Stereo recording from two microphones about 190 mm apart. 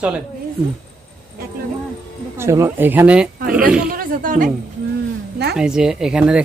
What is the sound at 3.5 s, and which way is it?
Oink, 5° right (ahead or behind).